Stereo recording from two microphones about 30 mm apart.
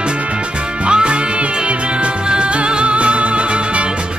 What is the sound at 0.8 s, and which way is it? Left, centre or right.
Music, right.